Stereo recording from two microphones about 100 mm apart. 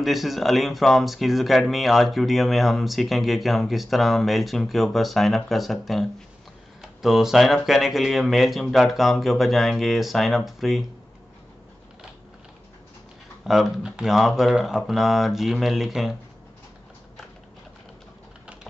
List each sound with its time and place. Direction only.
0.0 s speech: centre (ahead or behind)
13.5 s speech: 5° right (ahead or behind)